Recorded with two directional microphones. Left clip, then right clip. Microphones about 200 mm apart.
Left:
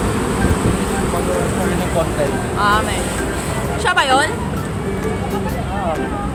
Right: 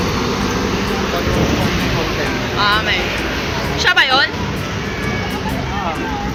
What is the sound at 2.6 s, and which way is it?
Music, 20° left (ahead or behind).